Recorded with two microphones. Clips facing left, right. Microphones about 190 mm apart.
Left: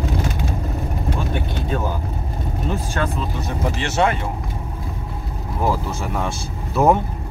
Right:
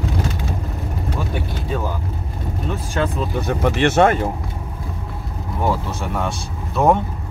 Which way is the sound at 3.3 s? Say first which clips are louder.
Right 9 dB; 65° right (ahead or behind).